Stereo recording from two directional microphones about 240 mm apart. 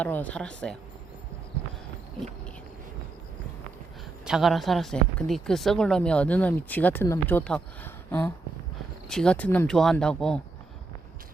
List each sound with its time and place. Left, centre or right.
0.0 s speech: centre
4.3 s speech: centre